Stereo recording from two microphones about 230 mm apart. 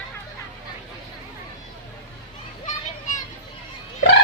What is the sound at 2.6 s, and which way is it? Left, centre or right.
Children playing, left.